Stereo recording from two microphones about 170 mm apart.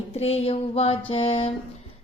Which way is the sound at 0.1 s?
35° left (ahead or behind).